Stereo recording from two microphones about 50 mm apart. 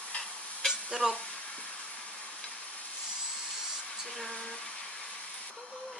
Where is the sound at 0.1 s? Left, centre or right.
Left.